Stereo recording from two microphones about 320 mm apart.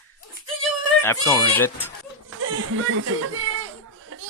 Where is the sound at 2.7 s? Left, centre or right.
Right.